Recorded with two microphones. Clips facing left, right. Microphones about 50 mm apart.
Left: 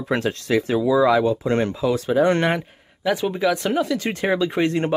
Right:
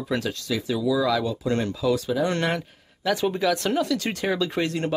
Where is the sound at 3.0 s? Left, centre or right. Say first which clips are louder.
Left 2 dB; centre.